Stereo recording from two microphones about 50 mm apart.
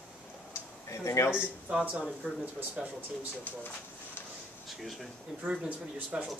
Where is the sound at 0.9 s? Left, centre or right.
Left.